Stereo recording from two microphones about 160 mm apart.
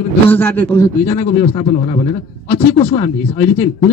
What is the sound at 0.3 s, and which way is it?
Speech, 10° left (ahead or behind).